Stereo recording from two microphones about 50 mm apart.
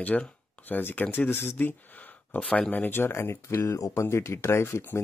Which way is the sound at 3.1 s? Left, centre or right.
Left.